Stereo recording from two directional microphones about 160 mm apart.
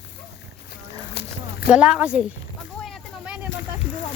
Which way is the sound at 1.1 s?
90° left.